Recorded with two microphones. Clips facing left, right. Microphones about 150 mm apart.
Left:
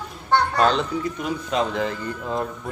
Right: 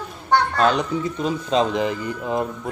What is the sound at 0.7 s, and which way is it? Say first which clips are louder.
Speech: right 1 dB; 25° right (ahead or behind).